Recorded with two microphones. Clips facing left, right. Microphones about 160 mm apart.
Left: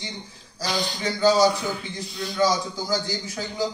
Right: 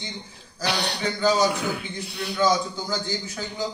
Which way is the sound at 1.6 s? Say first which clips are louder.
Right 1 dB; 65° right (ahead or behind).